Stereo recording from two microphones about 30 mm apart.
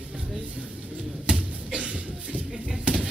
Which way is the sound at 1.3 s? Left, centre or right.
Right.